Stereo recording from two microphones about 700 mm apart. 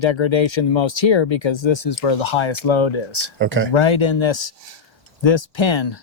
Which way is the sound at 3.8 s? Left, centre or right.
Left.